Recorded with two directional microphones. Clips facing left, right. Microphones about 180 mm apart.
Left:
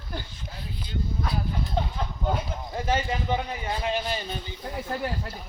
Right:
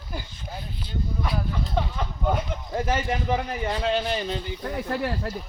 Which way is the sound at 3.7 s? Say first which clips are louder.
Right 3 dB; 70° right (ahead or behind).